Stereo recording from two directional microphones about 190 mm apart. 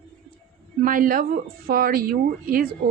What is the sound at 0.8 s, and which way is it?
Speech, 50° right (ahead or behind).